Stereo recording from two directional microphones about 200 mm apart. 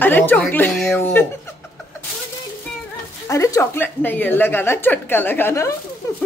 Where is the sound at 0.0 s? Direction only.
10° left (ahead or behind).